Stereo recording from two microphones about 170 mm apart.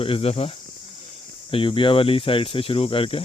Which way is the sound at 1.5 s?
30° left (ahead or behind).